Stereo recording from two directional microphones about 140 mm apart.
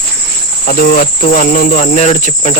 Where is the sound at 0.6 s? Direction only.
85° left; by 2.5 s 50° left (ahead or behind).